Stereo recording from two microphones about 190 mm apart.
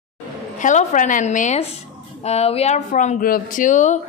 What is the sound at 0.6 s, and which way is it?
A woman's voice, 40° left (ahead or behind).